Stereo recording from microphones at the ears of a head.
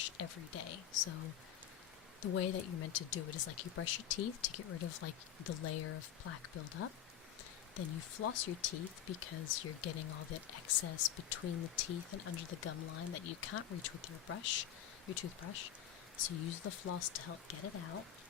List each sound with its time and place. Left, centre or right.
0.0 s speech: left